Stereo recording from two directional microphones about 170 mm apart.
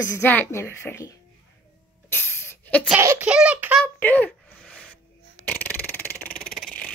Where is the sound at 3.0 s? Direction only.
15° right (ahead or behind).